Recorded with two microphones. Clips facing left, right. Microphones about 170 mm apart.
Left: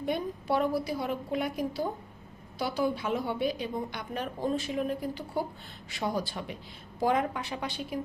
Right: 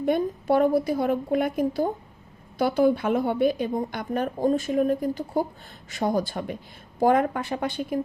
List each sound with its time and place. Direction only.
0.0 s a woman's voice: 50° right (ahead or behind)